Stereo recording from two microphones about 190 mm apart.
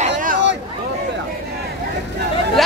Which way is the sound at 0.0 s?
45° right (ahead or behind).